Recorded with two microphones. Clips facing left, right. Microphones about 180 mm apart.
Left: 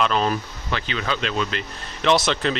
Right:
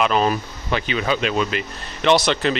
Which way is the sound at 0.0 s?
10° right (ahead or behind).